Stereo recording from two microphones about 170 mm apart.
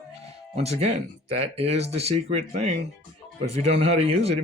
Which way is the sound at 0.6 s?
40° right (ahead or behind).